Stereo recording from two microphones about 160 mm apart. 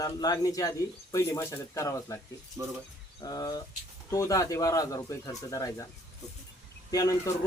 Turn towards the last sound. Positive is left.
turn(degrees=20)  # may be behind; listen again after turning